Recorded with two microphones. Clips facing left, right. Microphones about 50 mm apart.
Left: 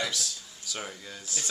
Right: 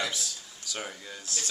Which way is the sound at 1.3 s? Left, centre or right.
Centre.